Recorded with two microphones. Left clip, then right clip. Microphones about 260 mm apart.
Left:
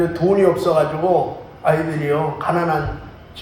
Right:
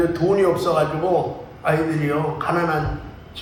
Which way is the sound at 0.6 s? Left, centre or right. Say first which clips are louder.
Left 3 dB; left.